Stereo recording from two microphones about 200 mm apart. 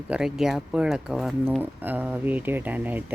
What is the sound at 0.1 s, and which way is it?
Speech, centre (ahead or behind).